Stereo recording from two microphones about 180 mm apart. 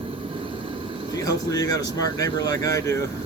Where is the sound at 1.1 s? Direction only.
20° left (ahead or behind).